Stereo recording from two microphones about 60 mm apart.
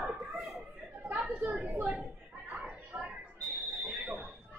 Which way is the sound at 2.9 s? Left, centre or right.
Right.